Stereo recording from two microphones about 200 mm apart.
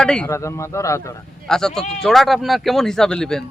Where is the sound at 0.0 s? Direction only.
5° left (ahead or behind).